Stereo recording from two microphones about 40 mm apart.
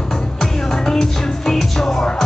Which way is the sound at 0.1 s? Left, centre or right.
Centre.